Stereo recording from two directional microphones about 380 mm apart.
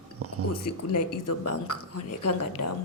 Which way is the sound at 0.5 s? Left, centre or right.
Left.